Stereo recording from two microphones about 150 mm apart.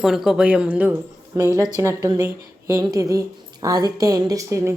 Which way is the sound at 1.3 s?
20° right (ahead or behind).